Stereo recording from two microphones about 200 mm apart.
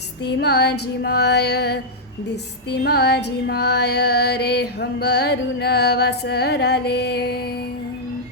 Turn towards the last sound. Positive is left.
turn(degrees=50)  # may be behind; listen again after turning